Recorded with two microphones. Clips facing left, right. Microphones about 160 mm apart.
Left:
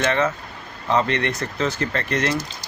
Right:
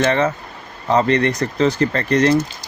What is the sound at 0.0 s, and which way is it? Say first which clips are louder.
Speech: right 4 dB; 35° right (ahead or behind).